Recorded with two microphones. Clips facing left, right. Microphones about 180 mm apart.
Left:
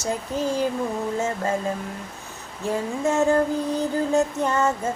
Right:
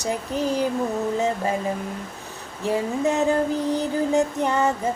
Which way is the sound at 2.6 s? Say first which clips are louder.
Right 2 dB; 15° right (ahead or behind).